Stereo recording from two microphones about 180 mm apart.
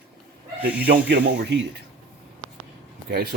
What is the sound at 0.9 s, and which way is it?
Speech, 80° right.